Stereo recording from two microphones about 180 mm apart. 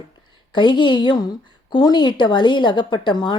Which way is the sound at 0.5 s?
25° left (ahead or behind).